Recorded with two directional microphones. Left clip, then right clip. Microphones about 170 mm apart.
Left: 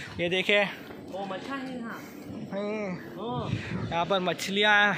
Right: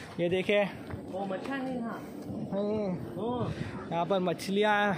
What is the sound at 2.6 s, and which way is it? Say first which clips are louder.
A man's voice: even; 20° right (ahead or behind).